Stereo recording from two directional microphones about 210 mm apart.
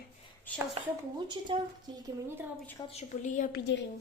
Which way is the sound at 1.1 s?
20° right (ahead or behind).